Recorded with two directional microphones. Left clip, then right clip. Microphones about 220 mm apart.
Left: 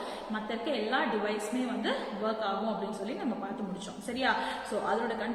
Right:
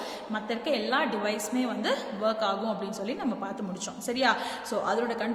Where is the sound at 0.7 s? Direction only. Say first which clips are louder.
Right 3 dB; 50° right (ahead or behind).